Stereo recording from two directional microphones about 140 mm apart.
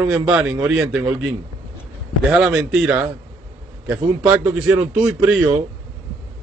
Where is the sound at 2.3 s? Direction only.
5° right (ahead or behind).